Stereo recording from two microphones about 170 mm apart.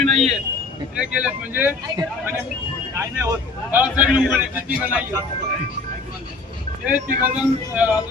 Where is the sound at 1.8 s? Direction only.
25° right (ahead or behind).